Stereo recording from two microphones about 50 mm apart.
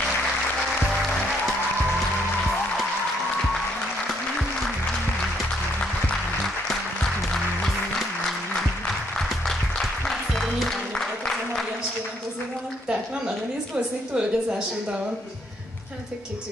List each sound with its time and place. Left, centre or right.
9.1 s music: centre
12.8 s a sound: right
13.7 s a woman's voice: centre